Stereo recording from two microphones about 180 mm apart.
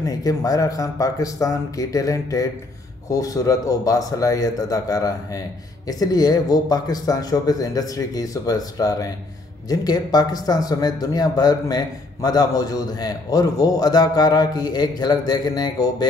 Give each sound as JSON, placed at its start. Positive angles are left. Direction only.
{"t": 0.0, "sound": "speech", "side_deg": 20}